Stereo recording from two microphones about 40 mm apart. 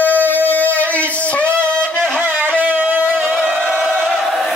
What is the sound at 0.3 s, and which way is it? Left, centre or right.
Music, left.